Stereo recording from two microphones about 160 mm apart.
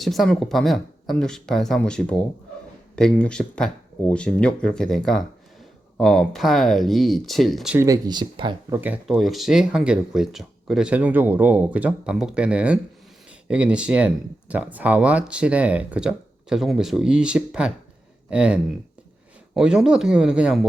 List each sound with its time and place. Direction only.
0.0 s speech: centre (ahead or behind)
7.8 s speech: 25° right (ahead or behind)
8.7 s speech: 10° right (ahead or behind)